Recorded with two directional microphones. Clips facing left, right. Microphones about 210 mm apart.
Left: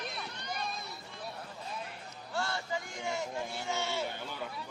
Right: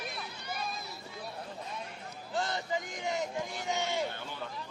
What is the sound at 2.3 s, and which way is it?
A man's voice, 20° right (ahead or behind).